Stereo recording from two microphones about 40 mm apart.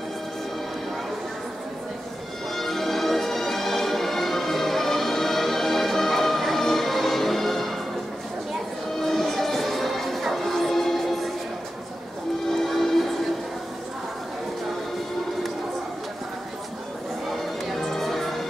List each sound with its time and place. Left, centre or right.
2.5 s music: centre
9.0 s music: centre
12.4 s music: centre
17.6 s music: centre